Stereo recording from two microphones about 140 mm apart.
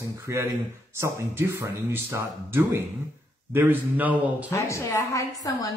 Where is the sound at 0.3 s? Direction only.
20° right (ahead or behind).